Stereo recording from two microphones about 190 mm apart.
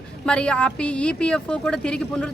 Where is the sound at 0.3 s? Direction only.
5° left (ahead or behind).